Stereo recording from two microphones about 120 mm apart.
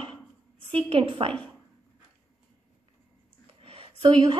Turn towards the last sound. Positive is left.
turn(degrees=-45)  # may be behind; listen again after turning